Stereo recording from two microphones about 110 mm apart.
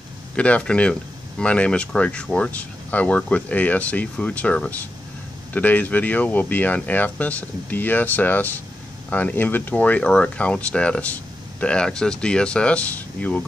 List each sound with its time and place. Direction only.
0.4 s speech: 10° left (ahead or behind)